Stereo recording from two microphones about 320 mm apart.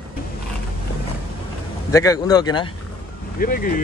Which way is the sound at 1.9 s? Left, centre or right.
Centre.